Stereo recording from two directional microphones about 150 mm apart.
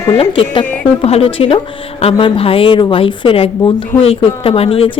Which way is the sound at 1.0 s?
40° left (ahead or behind).